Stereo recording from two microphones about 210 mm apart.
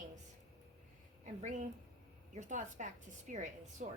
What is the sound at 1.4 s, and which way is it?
Speech, 35° right (ahead or behind).